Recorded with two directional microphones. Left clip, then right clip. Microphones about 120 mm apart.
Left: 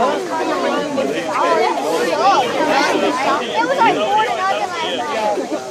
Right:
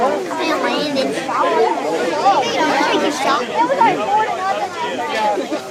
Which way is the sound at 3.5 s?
45° left (ahead or behind).